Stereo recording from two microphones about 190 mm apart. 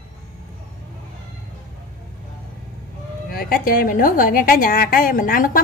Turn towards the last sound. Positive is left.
turn(degrees=45)  # may be behind; listen again after turning